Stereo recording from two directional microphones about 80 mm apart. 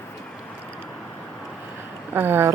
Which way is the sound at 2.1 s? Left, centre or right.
Right.